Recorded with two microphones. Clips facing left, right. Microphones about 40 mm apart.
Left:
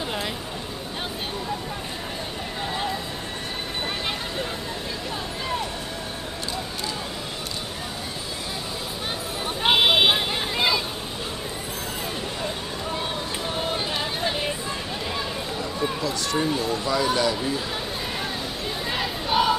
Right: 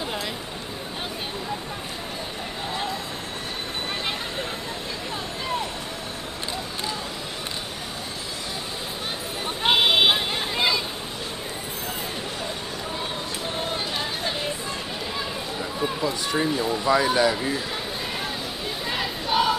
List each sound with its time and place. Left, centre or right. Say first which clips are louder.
9.6 s vehicle: left 1 dB; centre
13.6 s run: left 1 dB; centre
16.0 s a sound: right 1 dB; centre
16.5 s speech: right 3 dB; centre
18.9 s crowd: even; centre